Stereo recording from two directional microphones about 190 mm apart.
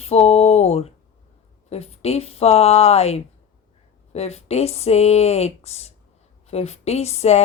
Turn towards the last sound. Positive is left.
turn(degrees=35)  # may be behind; listen again after turning